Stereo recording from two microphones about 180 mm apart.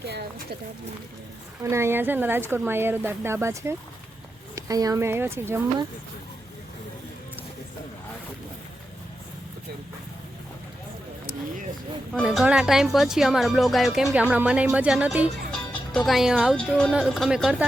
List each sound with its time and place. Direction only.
0.0 s speech: 70° right (ahead or behind)
1.6 s speech: 15° right (ahead or behind)
12.1 s speech: centre (ahead or behind)